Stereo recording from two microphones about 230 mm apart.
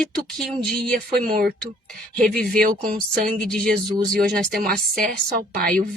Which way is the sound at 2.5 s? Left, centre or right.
Right.